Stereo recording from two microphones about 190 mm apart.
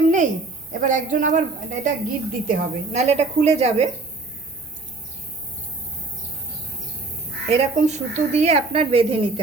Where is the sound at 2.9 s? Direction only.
35° right (ahead or behind).